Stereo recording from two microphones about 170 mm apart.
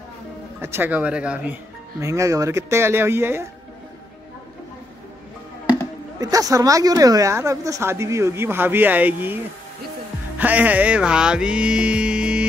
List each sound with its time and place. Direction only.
0.6 s a woman's voice: 15° right (ahead or behind)
6.1 s a woman's voice: 20° right (ahead or behind)
10.3 s music: 10° right (ahead or behind)